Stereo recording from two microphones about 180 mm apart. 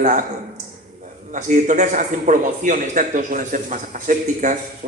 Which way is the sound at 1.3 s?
45° right (ahead or behind).